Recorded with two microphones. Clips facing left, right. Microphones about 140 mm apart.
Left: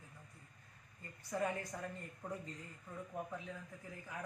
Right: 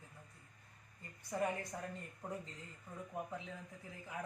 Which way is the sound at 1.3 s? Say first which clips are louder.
Even; 15° right (ahead or behind).